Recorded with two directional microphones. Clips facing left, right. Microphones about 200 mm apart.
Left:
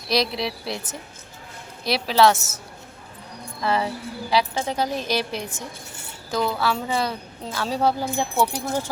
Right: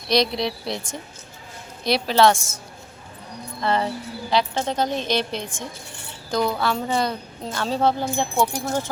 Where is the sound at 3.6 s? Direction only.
5° left (ahead or behind).